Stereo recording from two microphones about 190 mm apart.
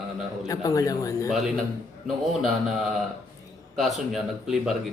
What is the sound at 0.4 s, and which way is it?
Speech, 20° left (ahead or behind).